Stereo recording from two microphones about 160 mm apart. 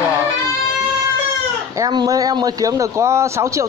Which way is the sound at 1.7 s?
25° right (ahead or behind).